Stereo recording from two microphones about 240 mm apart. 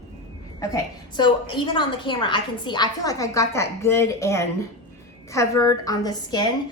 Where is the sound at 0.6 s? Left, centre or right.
Centre.